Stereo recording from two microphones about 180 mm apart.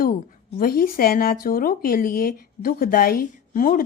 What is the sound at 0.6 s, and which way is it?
Speech, 55° left (ahead or behind).